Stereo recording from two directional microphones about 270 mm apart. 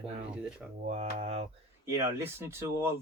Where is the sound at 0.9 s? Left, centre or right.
Right.